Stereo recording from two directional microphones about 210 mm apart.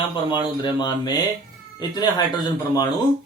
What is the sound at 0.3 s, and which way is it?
A man's voice, 20° left (ahead or behind).